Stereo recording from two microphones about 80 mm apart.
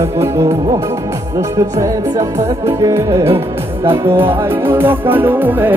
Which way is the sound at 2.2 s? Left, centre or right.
Right.